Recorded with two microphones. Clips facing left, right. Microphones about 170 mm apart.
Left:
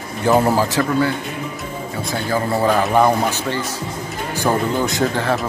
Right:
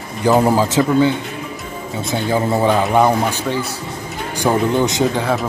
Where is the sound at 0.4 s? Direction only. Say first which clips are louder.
Right 2 dB; 15° right (ahead or behind).